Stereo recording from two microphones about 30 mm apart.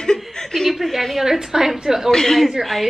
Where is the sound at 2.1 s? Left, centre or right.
Centre.